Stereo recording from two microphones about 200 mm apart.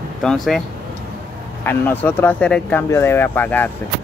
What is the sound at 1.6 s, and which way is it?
Speech, 10° left (ahead or behind).